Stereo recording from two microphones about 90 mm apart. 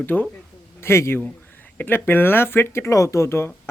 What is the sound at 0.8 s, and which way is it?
Speech, 30° left (ahead or behind).